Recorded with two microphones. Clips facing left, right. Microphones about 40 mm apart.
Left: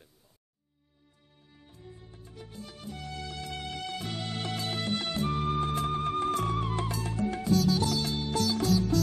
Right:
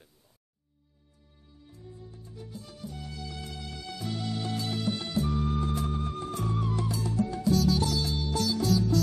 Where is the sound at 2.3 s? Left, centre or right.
Left.